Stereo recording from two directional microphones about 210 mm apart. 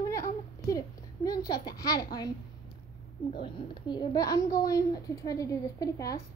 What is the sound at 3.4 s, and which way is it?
A woman's voice, 20° left (ahead or behind).